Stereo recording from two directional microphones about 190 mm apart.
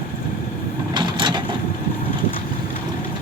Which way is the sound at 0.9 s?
25° right (ahead or behind).